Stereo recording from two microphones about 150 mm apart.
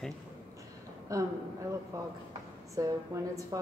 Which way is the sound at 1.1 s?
20° right (ahead or behind).